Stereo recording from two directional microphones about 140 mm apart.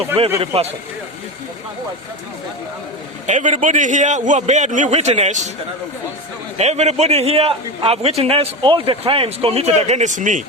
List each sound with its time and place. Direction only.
0.3 s a man's voice: 45° right (ahead or behind)
3.2 s a man's voice: 60° right (ahead or behind)
6.6 s a man's voice: 50° right (ahead or behind)